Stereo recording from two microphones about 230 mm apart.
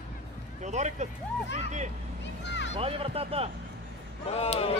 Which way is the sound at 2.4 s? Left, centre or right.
Left.